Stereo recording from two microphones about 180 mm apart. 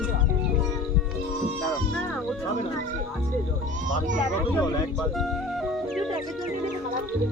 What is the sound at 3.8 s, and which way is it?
Speech, 45° right (ahead or behind).